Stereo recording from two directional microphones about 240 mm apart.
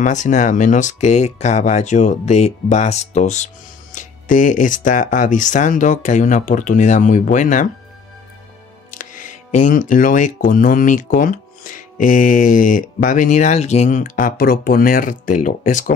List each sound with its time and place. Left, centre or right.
0.0 s speech: left
8.9 s speech: left